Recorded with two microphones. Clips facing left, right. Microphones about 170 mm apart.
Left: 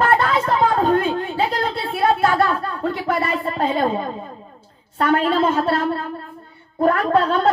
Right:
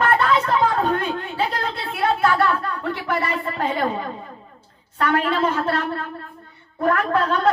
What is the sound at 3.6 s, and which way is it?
A woman's voice, 30° left (ahead or behind).